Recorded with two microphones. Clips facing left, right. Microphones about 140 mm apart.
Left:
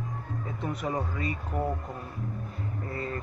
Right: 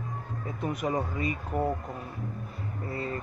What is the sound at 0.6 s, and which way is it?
Speech, 10° right (ahead or behind).